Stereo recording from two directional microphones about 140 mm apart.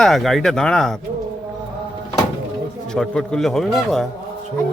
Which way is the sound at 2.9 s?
5° left (ahead or behind).